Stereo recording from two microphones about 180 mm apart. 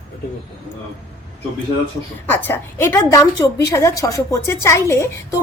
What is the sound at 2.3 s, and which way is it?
A woman's voice, 10° left (ahead or behind).